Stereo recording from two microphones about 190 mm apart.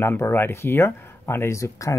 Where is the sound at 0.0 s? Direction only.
10° left (ahead or behind).